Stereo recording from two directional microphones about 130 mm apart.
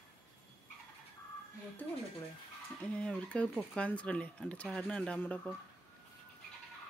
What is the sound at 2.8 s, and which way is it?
Speech, 10° left (ahead or behind).